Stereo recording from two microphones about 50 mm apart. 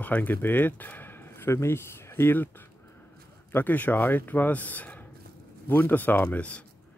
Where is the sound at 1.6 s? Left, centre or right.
Left.